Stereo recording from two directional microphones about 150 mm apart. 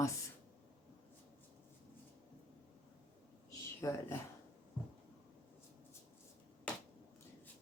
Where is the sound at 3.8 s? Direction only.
20° left (ahead or behind).